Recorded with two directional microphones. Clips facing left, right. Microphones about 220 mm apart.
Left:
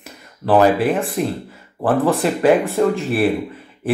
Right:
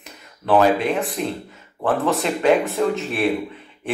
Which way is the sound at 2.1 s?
Centre (ahead or behind).